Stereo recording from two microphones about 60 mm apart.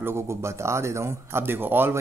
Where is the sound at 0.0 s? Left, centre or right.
Right.